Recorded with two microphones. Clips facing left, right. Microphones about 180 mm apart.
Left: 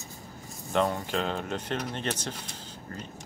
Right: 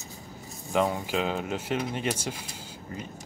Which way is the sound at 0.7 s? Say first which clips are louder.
Right 1 dB; 5° right (ahead or behind).